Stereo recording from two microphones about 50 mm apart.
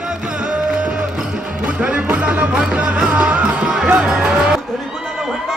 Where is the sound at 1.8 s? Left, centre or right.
Right.